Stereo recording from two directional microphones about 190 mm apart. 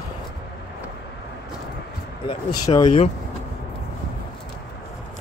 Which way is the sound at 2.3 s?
25° left (ahead or behind).